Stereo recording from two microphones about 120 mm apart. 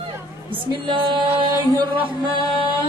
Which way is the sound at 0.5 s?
45° right (ahead or behind).